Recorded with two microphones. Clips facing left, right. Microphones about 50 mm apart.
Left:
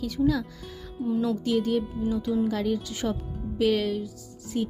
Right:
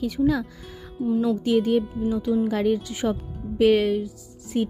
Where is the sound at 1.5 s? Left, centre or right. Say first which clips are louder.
Right 4 dB; right.